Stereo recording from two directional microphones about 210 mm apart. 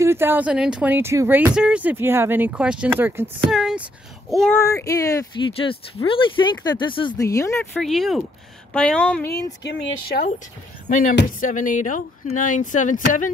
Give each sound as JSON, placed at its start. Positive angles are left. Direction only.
{"t": 0.0, "sound": "speech", "side_deg": -10}
{"t": 4.6, "sound": "speech", "side_deg": 15}
{"t": 7.7, "sound": "speech", "side_deg": 0}
{"t": 9.6, "sound": "speech", "side_deg": 55}
{"t": 11.0, "sound": "speech", "side_deg": 40}